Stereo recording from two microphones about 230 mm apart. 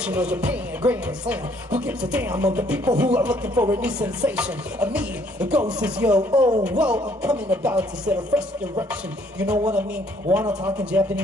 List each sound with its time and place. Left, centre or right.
0.0 s chopping: centre
6.3 s speech: centre
6.6 s chopping: centre
10.3 s a man's voice: centre